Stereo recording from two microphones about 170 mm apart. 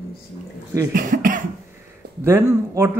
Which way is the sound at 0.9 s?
55° right (ahead or behind).